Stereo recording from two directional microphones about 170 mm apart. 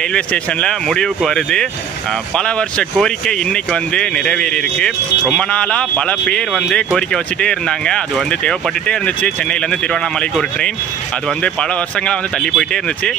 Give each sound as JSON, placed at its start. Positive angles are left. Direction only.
{"t": 0.1, "sound": "speech", "side_deg": 5}
{"t": 12.1, "sound": "speech", "side_deg": 5}